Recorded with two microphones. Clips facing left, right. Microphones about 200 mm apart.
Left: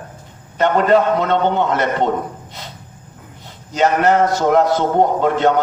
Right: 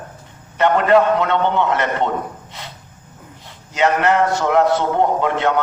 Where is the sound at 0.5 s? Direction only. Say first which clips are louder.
Even; 40° left (ahead or behind).